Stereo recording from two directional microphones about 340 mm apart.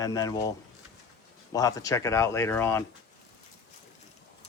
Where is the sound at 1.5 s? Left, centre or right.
Centre.